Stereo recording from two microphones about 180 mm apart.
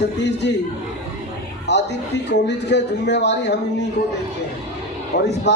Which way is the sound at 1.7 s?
70° left (ahead or behind).